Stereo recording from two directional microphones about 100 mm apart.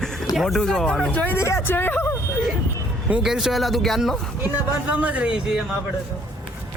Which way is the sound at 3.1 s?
5° right (ahead or behind).